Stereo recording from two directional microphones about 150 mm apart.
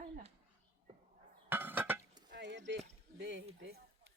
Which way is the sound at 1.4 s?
15° right (ahead or behind).